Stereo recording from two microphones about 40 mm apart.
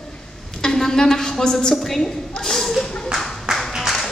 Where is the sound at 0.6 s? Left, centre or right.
Centre.